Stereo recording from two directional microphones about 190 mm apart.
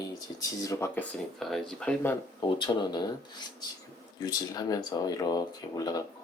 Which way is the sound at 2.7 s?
20° left (ahead or behind).